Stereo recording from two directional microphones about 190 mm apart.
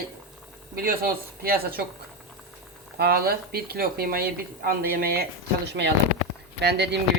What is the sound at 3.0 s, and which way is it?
Speech, 55° right (ahead or behind).